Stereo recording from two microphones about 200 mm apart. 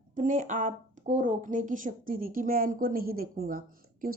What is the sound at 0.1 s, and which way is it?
A woman's voice, 40° right (ahead or behind).